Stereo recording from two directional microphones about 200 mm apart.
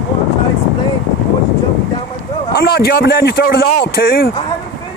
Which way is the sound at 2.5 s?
50° left (ahead or behind).